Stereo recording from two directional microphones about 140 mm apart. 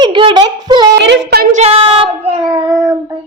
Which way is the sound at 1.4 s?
60° right (ahead or behind).